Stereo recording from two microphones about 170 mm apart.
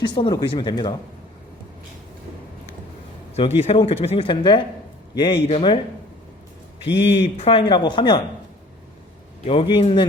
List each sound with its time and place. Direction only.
0.0 s speech: 25° left (ahead or behind)
3.3 s speech: 35° left (ahead or behind)
7.2 s speech: 35° left (ahead or behind)
9.5 s speech: 35° left (ahead or behind)